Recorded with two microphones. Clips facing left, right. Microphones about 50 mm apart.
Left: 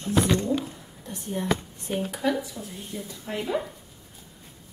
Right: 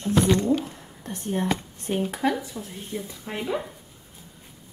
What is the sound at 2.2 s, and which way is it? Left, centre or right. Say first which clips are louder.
Speech: right 1 dB; right.